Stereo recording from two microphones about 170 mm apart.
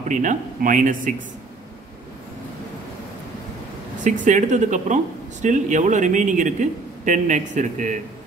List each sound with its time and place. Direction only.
0.1 s speech: 50° right (ahead or behind)
4.0 s speech: 45° right (ahead or behind)